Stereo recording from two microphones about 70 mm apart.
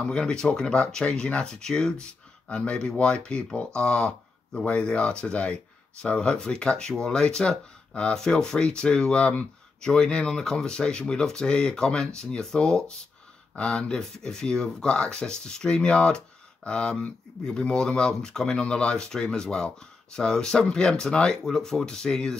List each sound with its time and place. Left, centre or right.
0.0 s speech: centre